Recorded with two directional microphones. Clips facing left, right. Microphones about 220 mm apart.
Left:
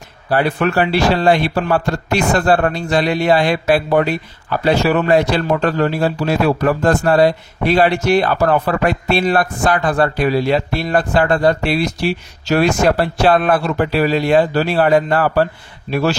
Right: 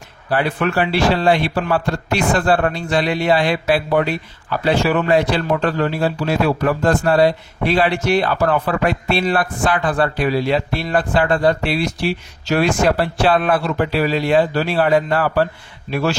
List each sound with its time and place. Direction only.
0.3 s a man's voice: 40° left (ahead or behind)